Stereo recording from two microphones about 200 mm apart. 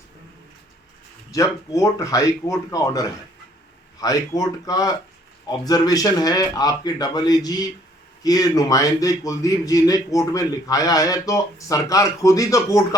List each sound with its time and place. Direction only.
1.3 s a man's voice: 15° left (ahead or behind)